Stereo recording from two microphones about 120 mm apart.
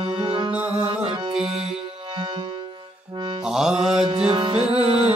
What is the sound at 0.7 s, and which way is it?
Music, 55° right (ahead or behind).